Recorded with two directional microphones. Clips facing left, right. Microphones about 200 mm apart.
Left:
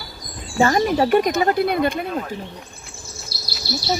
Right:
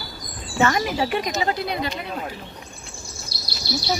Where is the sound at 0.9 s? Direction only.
50° left (ahead or behind).